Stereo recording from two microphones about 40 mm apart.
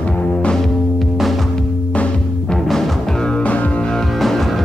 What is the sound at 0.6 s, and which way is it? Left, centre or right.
Music, centre.